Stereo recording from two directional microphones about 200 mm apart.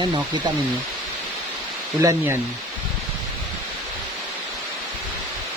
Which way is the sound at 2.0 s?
15° right (ahead or behind).